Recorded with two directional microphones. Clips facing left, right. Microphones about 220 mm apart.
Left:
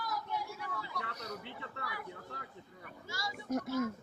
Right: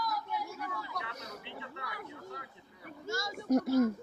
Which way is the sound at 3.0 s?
45° right (ahead or behind).